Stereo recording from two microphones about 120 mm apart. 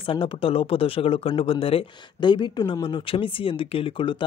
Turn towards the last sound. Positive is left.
turn(degrees=50)  # may be behind; listen again after turning